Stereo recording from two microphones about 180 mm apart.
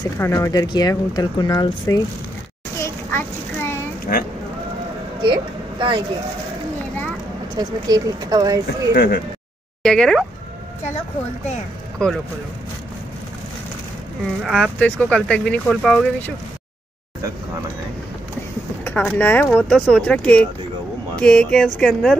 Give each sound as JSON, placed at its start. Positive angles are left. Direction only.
{"t": 0.0, "sound": "speech", "side_deg": 15}
{"t": 2.8, "sound": "child singing", "side_deg": 15}
{"t": 5.2, "sound": "speech", "side_deg": -25}
{"t": 7.5, "sound": "speech", "side_deg": -20}
{"t": 8.9, "sound": "speech", "side_deg": 65}
{"t": 9.8, "sound": "speech", "side_deg": 5}
{"t": 12.0, "sound": "speech", "side_deg": 5}
{"t": 14.4, "sound": "speech", "side_deg": 0}
{"t": 18.9, "sound": "speech", "side_deg": 10}